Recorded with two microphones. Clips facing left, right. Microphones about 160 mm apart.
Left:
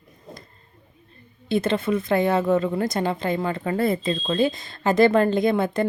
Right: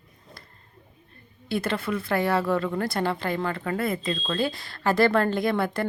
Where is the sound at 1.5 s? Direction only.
20° left (ahead or behind).